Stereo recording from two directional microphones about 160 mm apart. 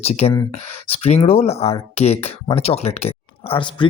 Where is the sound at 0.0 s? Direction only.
40° left (ahead or behind).